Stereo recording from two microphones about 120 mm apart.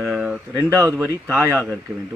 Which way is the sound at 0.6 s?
25° right (ahead or behind).